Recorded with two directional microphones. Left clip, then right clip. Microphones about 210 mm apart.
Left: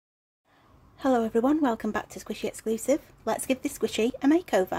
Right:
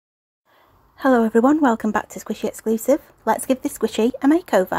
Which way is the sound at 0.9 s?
15° right (ahead or behind).